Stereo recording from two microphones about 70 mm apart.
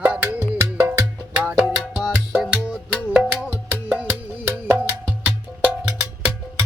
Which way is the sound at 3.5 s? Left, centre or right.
Right.